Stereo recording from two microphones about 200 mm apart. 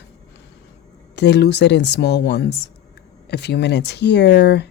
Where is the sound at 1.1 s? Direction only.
60° left (ahead or behind).